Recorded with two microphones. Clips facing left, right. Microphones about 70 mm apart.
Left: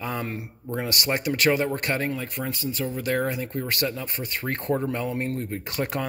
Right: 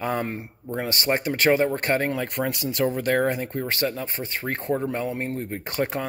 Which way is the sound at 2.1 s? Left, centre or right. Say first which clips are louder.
Right 4 dB; right.